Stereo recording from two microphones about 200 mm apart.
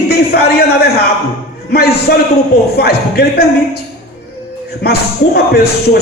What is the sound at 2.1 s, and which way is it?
Speech, 50° left (ahead or behind).